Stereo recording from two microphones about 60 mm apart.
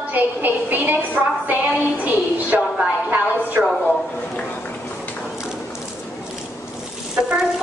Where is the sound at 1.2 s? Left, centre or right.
Centre.